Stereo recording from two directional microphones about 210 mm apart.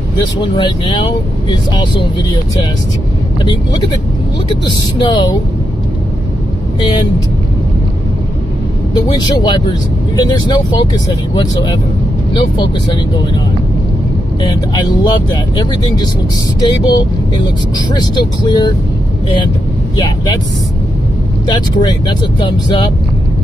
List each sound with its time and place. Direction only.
0.4 s speech: 20° left (ahead or behind)
4.6 s speech: 20° left (ahead or behind)
9.1 s speech: 20° left (ahead or behind)
14.5 s speech: 20° left (ahead or behind)
16.6 s speech: 20° left (ahead or behind)
21.5 s speech: 20° left (ahead or behind)